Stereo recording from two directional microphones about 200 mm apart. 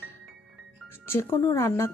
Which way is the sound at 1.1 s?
10° left (ahead or behind).